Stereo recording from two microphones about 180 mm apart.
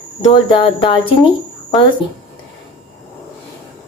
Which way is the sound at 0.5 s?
30° left (ahead or behind).